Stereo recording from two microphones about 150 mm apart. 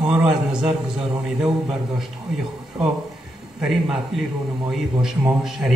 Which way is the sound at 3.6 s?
Centre (ahead or behind).